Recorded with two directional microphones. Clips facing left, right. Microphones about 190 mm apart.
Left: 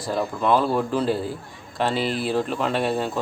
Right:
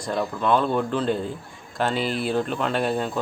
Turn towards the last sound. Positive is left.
turn(degrees=0)  # may be behind; listen again after turning